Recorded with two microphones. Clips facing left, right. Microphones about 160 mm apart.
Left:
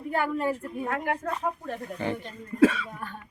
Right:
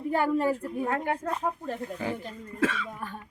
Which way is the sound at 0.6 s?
25° right (ahead or behind).